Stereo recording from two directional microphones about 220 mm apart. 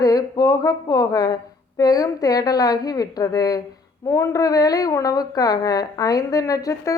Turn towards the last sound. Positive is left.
turn(degrees=15)  # may be behind; listen again after turning